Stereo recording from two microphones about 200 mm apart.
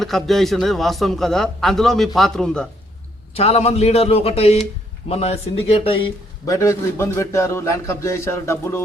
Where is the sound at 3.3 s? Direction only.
30° left (ahead or behind).